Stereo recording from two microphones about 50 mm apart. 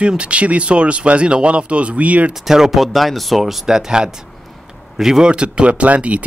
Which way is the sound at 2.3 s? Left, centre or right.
Centre.